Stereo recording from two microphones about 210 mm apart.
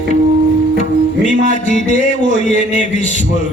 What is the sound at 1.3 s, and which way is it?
Speech, 35° left (ahead or behind).